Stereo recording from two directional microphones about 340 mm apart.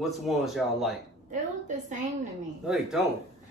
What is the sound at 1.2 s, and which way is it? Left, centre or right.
Speech, right.